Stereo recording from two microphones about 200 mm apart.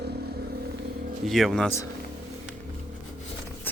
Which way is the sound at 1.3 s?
Centre (ahead or behind).